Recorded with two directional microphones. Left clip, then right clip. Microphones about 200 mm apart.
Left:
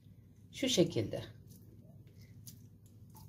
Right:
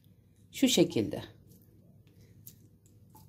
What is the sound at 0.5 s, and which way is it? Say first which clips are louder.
Speech: right 5 dB; 55° right (ahead or behind).